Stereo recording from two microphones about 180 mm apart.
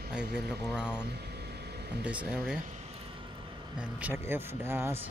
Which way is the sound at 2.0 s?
5° right (ahead or behind).